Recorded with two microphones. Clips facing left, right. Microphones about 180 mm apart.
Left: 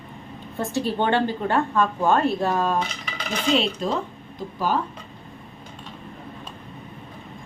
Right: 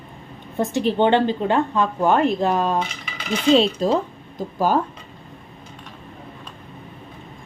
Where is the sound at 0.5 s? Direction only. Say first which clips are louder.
Right 4 dB; 20° right (ahead or behind).